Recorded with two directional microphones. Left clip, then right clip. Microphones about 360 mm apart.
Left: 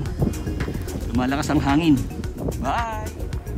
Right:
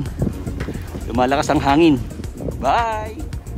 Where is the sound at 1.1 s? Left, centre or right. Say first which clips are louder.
Right 6 dB; centre.